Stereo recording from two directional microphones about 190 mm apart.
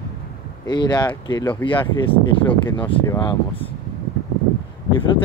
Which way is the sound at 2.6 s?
25° left (ahead or behind).